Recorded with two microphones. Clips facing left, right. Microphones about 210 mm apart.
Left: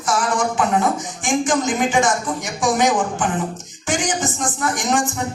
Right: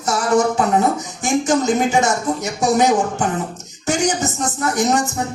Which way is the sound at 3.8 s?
40° right (ahead or behind).